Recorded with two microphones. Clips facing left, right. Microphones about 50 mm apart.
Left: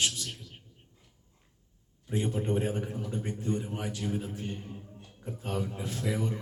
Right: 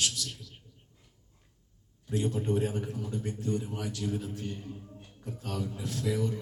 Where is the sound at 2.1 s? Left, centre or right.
Left.